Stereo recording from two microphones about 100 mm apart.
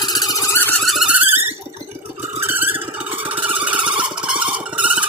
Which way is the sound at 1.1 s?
20° right (ahead or behind).